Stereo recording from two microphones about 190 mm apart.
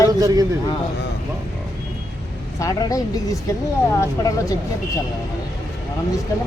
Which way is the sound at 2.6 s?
20° left (ahead or behind).